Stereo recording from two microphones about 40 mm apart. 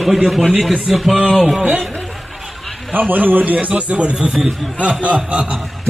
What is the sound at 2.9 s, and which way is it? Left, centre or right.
Speech, right.